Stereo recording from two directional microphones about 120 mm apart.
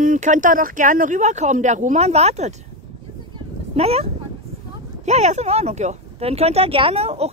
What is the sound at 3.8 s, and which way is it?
Speech, 60° right (ahead or behind).